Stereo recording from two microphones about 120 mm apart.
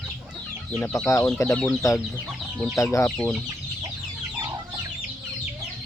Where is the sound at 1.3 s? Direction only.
15° left (ahead or behind).